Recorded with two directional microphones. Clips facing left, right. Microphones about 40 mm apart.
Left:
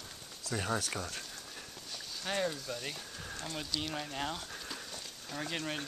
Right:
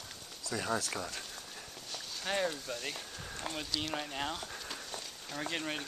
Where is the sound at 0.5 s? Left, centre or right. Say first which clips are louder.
Even; left.